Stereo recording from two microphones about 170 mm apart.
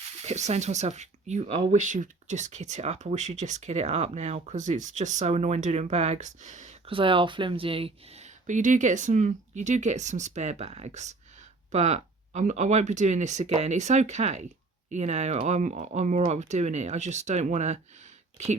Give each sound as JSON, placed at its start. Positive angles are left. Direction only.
{"t": 0.2, "sound": "speech", "side_deg": -40}
{"t": 6.9, "sound": "speech", "side_deg": -30}